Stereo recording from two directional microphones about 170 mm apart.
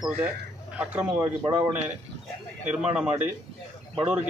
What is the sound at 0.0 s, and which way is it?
Speech, 5° right (ahead or behind).